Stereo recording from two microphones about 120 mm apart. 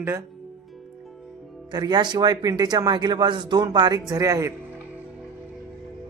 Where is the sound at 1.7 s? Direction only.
35° right (ahead or behind).